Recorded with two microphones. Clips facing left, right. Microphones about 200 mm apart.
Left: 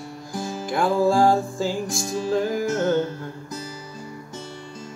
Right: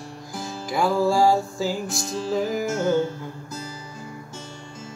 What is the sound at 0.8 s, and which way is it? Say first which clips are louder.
Music: left 1 dB; 15° left (ahead or behind).